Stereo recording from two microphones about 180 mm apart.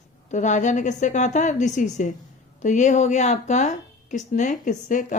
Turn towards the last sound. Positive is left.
turn(degrees=45)  # may be behind; listen again after turning